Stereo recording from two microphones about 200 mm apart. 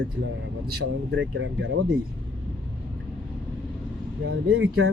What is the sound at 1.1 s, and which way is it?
Speech, 70° right (ahead or behind).